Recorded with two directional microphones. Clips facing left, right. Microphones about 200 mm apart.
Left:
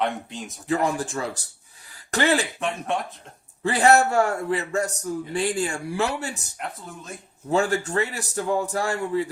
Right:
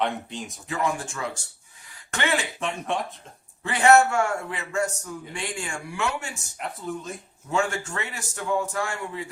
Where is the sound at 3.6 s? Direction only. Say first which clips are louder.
Even; 35° left (ahead or behind).